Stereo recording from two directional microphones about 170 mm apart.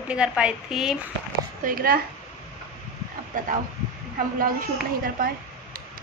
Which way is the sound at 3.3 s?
50° right (ahead or behind).